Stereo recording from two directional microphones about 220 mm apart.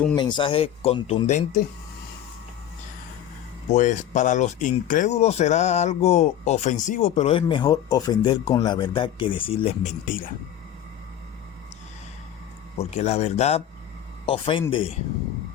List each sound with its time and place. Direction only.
0.3 s speech: 25° left (ahead or behind)
3.7 s speech: 35° left (ahead or behind)
12.8 s speech: 30° left (ahead or behind)